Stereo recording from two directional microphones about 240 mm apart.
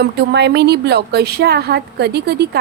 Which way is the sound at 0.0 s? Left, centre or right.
Right.